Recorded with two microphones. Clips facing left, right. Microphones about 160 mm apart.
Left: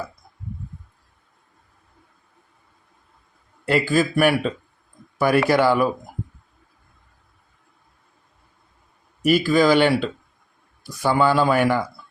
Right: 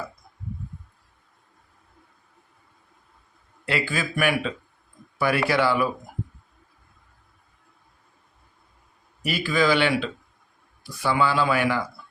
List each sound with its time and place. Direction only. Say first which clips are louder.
3.7 s speech: left 8 dB; 45° left (ahead or behind)
9.2 s speech: left 6 dB; 40° left (ahead or behind)